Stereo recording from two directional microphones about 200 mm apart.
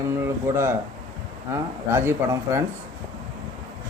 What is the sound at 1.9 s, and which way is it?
Speech, 10° right (ahead or behind).